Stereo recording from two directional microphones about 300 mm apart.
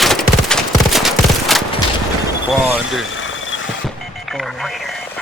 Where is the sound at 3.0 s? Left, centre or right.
Left.